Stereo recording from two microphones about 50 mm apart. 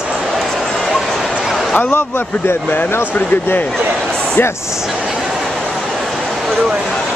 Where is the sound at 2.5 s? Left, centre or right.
Left.